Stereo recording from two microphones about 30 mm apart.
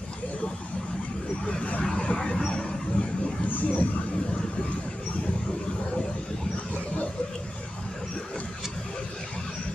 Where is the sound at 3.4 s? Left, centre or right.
Left.